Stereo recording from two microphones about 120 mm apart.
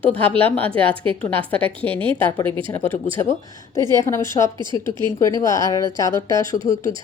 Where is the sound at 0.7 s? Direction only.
45° right (ahead or behind).